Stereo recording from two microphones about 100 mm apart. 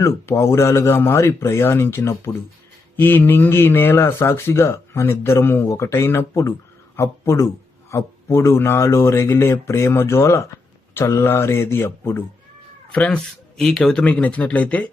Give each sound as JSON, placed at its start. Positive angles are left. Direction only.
{"t": 0.0, "sound": "speech", "side_deg": 30}
{"t": 12.9, "sound": "speech", "side_deg": 10}